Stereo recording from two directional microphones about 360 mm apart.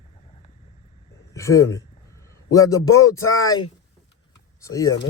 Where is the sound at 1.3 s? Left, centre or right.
Centre.